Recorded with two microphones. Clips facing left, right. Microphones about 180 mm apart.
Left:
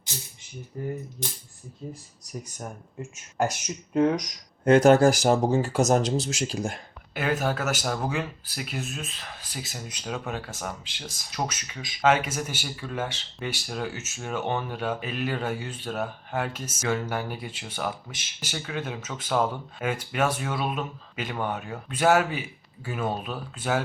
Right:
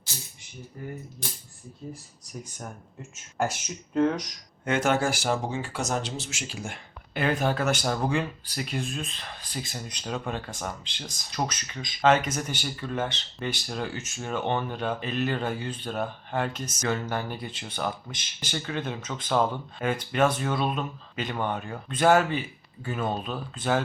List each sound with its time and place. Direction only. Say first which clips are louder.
3.9 s speech: left 2 dB; 10° left (ahead or behind)
4.6 s speech: left 8 dB; 40° left (ahead or behind)
7.1 s speech: right 1 dB; 5° left (ahead or behind)